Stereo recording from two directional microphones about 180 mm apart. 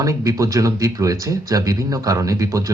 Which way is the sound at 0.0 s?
20° right (ahead or behind).